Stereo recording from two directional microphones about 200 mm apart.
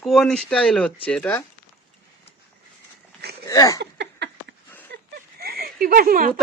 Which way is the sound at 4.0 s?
60° right (ahead or behind).